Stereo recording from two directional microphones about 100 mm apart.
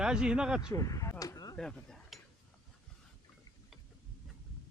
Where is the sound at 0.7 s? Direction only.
35° left (ahead or behind).